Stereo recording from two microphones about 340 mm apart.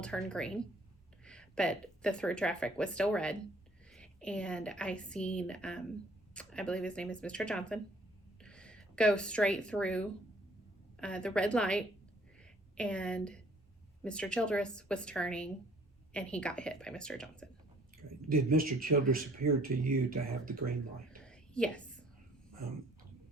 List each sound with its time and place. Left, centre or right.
0.0 s a woman's voice: centre
18.5 s speech: right
21.2 s whispering: centre